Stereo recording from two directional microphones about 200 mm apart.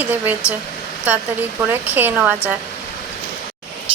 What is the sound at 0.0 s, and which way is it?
Speech, 10° right (ahead or behind).